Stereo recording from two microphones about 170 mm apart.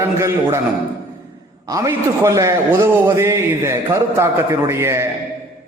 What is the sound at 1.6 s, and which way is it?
A man's voice, 20° right (ahead or behind).